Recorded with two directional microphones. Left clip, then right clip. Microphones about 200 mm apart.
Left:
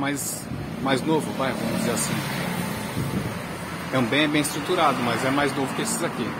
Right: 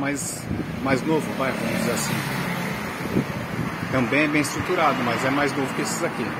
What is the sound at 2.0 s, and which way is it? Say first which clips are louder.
Speech: right 2 dB; 60° right (ahead or behind).